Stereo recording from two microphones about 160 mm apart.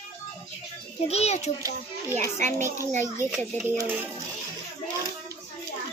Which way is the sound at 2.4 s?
50° right (ahead or behind).